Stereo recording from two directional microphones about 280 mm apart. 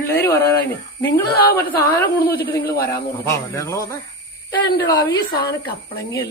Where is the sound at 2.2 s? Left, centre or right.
Left.